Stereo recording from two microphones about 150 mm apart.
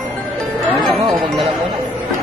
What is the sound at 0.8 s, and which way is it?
Music, centre (ahead or behind).